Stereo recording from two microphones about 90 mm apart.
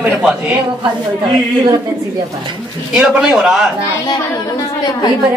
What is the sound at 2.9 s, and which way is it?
Speech, 10° right (ahead or behind).